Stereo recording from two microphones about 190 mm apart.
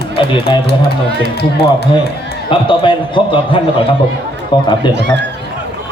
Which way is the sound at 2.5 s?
25° left (ahead or behind).